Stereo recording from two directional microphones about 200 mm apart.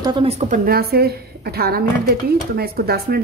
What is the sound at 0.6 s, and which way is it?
A woman's voice, 50° right (ahead or behind).